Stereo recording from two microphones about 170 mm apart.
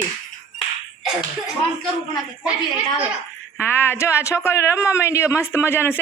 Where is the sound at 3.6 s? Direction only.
15° left (ahead or behind).